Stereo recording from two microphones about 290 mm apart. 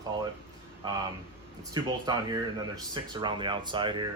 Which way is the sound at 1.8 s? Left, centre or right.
Centre.